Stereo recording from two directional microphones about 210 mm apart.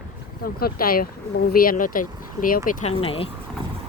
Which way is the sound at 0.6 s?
45° left (ahead or behind).